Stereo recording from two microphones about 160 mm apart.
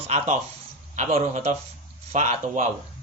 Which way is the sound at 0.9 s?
45° right (ahead or behind).